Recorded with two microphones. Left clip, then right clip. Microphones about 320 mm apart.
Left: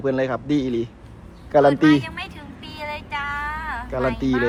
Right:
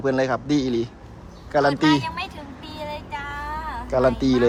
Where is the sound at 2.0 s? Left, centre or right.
Centre.